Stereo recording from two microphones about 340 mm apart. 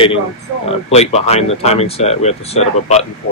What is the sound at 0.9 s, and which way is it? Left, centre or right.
Speech, centre.